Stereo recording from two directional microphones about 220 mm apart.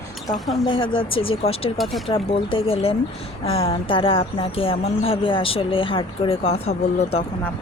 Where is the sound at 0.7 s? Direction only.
25° left (ahead or behind).